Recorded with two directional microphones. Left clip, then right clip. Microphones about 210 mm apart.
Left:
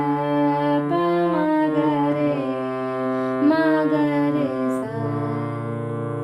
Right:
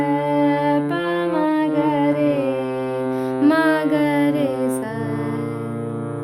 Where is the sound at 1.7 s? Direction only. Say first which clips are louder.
Right 2 dB; 10° right (ahead or behind).